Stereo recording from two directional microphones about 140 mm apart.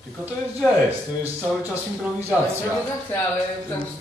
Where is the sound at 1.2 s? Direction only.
15° right (ahead or behind).